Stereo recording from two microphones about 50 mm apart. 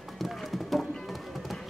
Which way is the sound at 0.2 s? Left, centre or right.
Centre.